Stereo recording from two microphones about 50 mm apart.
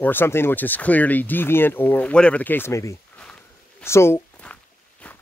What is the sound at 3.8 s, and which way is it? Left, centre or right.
Speech, left.